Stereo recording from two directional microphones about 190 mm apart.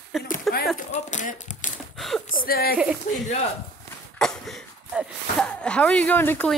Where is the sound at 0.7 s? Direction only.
40° left (ahead or behind).